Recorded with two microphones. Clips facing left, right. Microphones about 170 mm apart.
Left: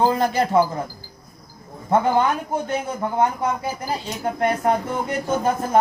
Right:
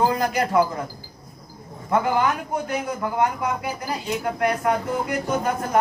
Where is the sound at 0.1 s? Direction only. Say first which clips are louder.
Left 2 dB; 30° left (ahead or behind).